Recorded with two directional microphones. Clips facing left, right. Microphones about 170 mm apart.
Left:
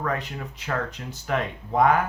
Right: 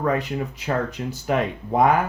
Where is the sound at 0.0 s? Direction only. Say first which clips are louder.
Right 6 dB; 10° right (ahead or behind).